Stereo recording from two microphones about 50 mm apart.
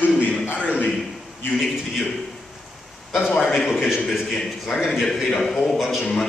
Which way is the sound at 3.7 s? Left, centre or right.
Centre.